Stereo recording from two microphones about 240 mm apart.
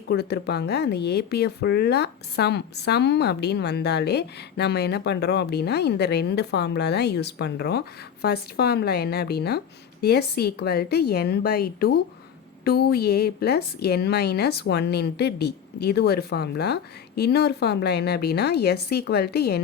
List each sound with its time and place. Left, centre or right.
0.1 s a woman's voice: left